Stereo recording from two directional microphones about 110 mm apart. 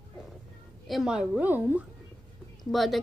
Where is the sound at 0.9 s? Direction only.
5° right (ahead or behind).